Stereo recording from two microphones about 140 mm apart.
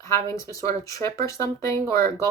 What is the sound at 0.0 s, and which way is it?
Speech, 20° left (ahead or behind).